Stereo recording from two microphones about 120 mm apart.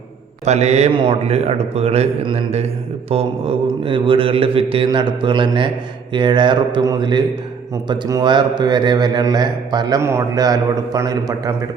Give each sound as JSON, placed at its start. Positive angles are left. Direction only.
{"t": 0.4, "sound": "a man's voice", "side_deg": -65}
{"t": 0.9, "sound": "a man's voice", "side_deg": -50}
{"t": 10.0, "sound": "a man's voice", "side_deg": -20}